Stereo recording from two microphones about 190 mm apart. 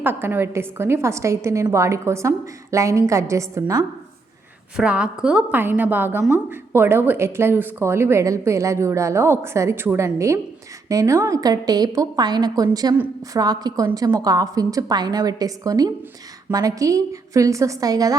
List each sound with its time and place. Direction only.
0.0 s speech: 10° right (ahead or behind)
4.8 s a woman's voice: 5° right (ahead or behind)